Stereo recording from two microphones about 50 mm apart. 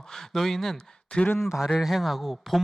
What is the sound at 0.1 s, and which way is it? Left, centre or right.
Speech, centre.